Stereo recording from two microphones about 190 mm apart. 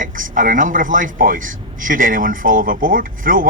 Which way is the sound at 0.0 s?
45° right (ahead or behind).